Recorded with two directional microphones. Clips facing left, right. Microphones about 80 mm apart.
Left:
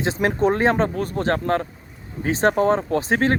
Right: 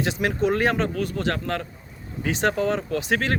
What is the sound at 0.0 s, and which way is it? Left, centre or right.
Speech, left.